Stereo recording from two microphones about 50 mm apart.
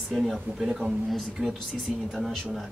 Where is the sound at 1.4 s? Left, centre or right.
Centre.